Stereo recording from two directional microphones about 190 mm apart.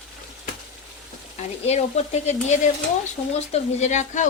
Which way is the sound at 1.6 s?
35° left (ahead or behind).